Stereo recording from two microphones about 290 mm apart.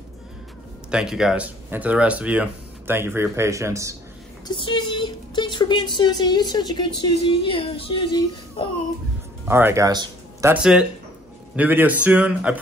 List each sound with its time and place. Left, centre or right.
0.9 s speech: centre
4.6 s a woman's voice: centre
9.5 s speech: centre